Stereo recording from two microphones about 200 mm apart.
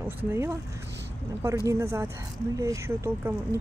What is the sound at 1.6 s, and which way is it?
Speech, 15° right (ahead or behind).